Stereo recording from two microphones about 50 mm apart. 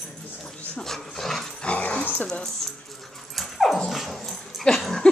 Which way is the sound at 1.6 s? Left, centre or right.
Left.